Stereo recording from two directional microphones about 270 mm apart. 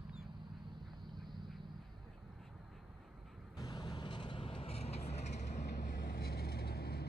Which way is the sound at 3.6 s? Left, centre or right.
Centre.